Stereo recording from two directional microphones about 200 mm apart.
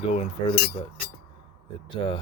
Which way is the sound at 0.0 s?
25° left (ahead or behind).